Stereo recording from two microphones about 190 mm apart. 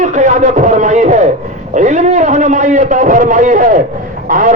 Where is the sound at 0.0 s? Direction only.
40° right (ahead or behind).